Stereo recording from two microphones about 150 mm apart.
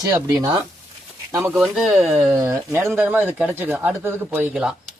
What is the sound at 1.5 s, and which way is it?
Speech, centre (ahead or behind).